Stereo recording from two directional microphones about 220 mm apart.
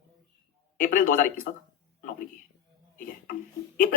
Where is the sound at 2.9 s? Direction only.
40° left (ahead or behind).